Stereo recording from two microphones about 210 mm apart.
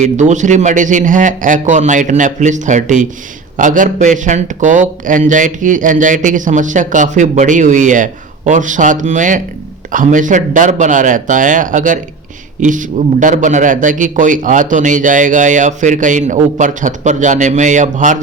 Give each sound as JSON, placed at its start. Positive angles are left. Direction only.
{"t": 0.0, "sound": "speech", "side_deg": -35}